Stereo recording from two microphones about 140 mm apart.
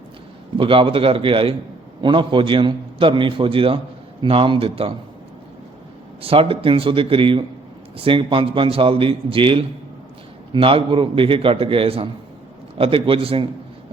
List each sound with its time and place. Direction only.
0.5 s a man's voice: 40° right (ahead or behind)
6.2 s a man's voice: 40° right (ahead or behind)